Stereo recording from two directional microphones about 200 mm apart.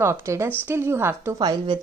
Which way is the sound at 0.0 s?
15° right (ahead or behind).